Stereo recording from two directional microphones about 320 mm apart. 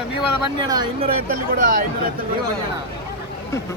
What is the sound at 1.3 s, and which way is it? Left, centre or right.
Speech, right.